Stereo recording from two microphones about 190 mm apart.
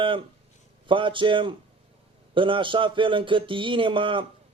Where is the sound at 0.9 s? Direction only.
25° right (ahead or behind).